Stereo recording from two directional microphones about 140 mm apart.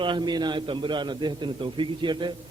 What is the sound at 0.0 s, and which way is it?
A man's voice, 35° right (ahead or behind).